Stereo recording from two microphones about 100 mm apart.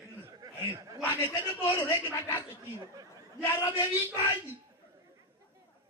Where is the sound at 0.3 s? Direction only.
35° right (ahead or behind).